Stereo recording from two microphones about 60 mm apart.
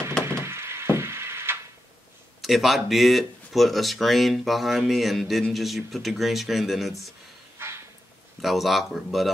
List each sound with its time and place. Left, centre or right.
0.3 s a sound: right
2.4 s speech: centre
7.5 s dog: right
8.4 s speech: centre